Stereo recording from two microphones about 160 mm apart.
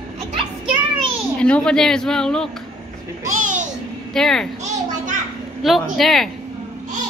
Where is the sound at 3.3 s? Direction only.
50° right (ahead or behind).